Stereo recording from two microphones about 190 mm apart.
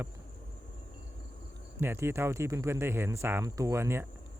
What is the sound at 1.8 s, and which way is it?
Speech, 10° right (ahead or behind).